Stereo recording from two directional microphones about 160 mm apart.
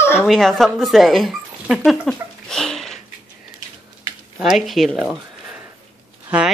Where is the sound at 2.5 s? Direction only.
Centre (ahead or behind).